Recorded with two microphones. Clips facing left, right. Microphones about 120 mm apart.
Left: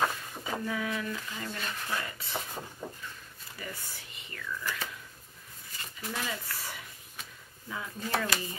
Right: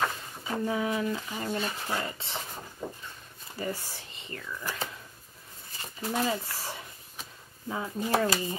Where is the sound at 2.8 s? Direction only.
5° right (ahead or behind).